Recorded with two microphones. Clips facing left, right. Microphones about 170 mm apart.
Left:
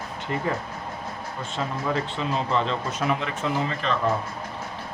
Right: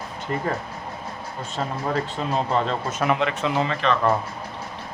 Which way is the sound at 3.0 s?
70° right (ahead or behind).